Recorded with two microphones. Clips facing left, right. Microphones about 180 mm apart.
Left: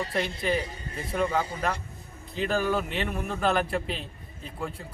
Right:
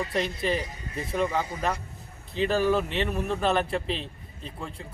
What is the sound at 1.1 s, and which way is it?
A man's voice, 5° right (ahead or behind).